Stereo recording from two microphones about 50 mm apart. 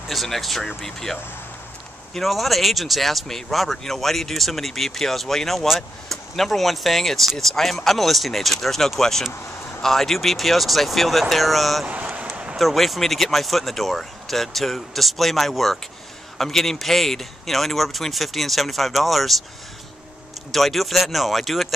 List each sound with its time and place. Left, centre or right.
0.1 s speech: centre
2.1 s speech: centre
11.9 s a sound: right
12.5 s speech: centre
20.5 s speech: centre